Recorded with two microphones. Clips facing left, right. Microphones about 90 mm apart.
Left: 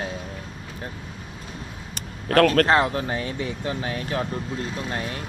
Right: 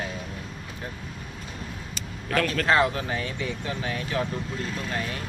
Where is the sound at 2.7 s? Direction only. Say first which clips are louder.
Left 2 dB; 30° left (ahead or behind).